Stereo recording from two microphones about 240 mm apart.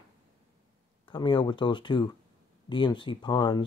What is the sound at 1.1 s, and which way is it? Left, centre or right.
Speech, centre.